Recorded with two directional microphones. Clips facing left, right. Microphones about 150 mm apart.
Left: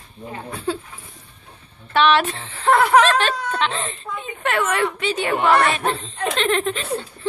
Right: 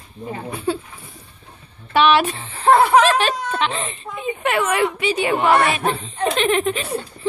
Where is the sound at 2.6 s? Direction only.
30° right (ahead or behind).